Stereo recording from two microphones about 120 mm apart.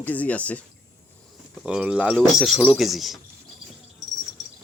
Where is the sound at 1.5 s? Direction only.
5° right (ahead or behind).